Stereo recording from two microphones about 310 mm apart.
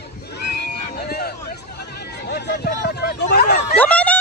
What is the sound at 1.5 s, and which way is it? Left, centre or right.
Hubbub, left.